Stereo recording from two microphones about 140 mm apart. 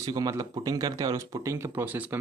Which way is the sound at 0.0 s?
25° right (ahead or behind).